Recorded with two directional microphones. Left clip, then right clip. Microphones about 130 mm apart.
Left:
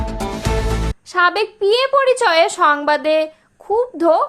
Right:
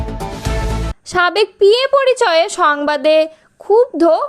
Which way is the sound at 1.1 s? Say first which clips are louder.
Right 2 dB; 45° right (ahead or behind).